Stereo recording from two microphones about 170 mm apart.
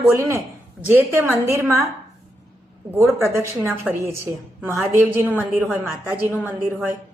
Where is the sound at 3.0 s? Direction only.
15° right (ahead or behind).